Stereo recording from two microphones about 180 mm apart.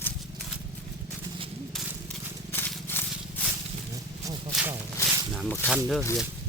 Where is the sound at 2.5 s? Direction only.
10° left (ahead or behind).